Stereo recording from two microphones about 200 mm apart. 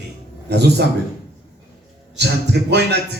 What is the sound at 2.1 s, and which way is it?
Speech, 55° right (ahead or behind).